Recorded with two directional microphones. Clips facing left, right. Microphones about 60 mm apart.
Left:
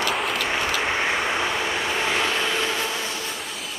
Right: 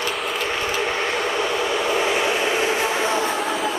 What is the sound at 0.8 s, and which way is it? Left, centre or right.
Vehicle, centre.